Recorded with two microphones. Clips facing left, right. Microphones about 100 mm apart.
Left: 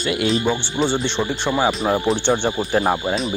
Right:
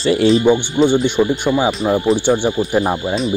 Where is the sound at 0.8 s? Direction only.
10° right (ahead or behind).